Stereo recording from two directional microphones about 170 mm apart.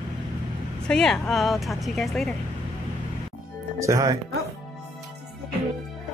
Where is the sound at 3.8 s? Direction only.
20° right (ahead or behind).